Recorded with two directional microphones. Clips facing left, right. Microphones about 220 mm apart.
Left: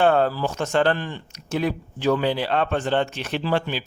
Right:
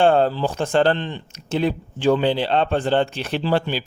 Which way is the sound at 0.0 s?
30° right (ahead or behind).